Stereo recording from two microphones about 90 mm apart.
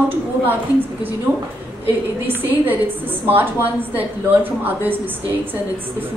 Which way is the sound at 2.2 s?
20° right (ahead or behind).